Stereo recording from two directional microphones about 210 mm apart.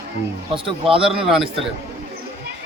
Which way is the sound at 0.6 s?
25° right (ahead or behind).